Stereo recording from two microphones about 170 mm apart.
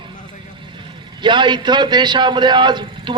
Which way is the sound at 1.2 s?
25° right (ahead or behind).